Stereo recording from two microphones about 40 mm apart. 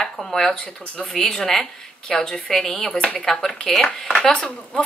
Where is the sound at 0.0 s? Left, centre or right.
Centre.